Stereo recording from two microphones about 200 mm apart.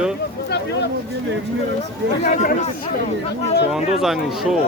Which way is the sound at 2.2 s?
35° left (ahead or behind).